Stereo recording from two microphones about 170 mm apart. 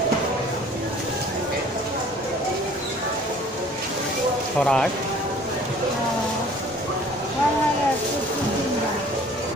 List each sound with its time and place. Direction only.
4.6 s speech: 5° left (ahead or behind)